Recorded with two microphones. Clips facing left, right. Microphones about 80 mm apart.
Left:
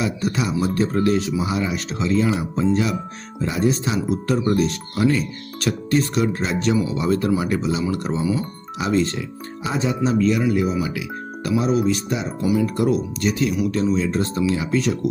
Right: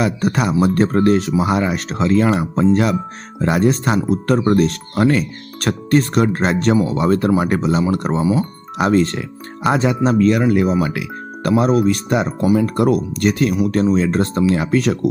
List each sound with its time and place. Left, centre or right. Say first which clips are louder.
0.0 s speech: right 5 dB; right
1.4 s speech: right 6 dB; right
8.2 s speech: right 5 dB; right
8.8 s speech: right 5 dB; right
12.7 s speech: right 4 dB; right
13.2 s speech: right 5 dB; right